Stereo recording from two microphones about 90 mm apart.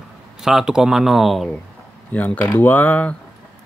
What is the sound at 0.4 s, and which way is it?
Speech, 5° right (ahead or behind).